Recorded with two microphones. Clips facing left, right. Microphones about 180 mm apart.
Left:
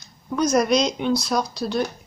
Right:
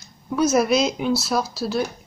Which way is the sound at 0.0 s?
5° right (ahead or behind).